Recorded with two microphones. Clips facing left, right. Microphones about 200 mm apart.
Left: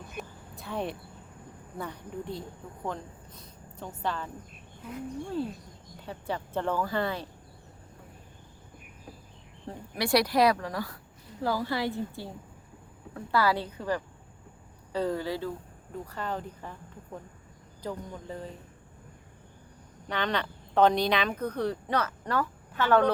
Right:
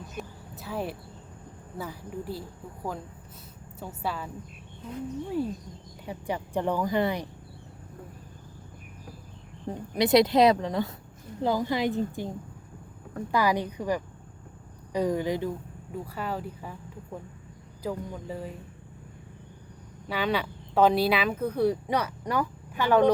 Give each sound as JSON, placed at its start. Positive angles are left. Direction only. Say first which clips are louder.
{"t": 0.2, "sound": "a sound", "louder": "right 2 dB", "side_deg": -5}
{"t": 1.8, "sound": "a woman's voice", "louder": "right 1 dB", "side_deg": -5}
{"t": 9.7, "sound": "speech", "louder": "right 5 dB", "side_deg": -20}
{"t": 13.3, "sound": "speech", "louder": "right 1 dB", "side_deg": -15}
{"t": 17.8, "sound": "speech", "louder": "right 3 dB", "side_deg": -10}
{"t": 20.1, "sound": "speech", "louder": "right 2 dB", "side_deg": -5}